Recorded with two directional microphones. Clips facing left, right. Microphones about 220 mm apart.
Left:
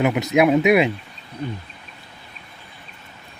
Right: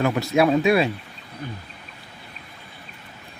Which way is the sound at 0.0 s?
20° left (ahead or behind).